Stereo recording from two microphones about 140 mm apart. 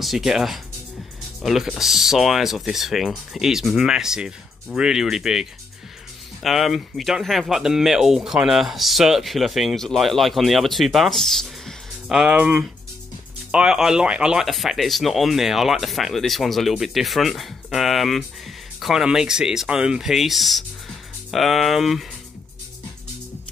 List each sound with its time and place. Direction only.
0.0 s speech: centre (ahead or behind)